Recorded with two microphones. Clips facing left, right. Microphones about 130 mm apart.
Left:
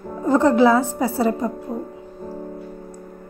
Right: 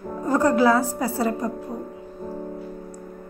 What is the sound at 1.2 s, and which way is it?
Speech, 25° left (ahead or behind).